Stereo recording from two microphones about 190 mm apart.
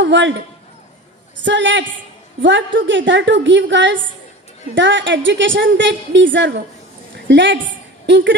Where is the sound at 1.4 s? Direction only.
70° right (ahead or behind).